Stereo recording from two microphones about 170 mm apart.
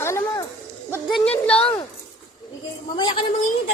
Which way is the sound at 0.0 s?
15° left (ahead or behind).